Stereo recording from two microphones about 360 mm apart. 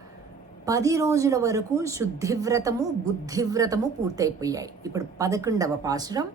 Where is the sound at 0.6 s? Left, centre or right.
Centre.